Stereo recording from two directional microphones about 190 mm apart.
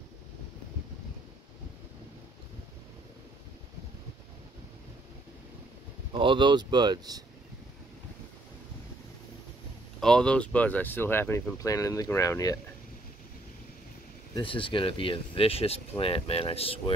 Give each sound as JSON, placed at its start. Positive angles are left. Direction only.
{"t": 6.1, "sound": "speech", "side_deg": -25}
{"t": 9.9, "sound": "speech", "side_deg": 5}
{"t": 14.3, "sound": "speech", "side_deg": 25}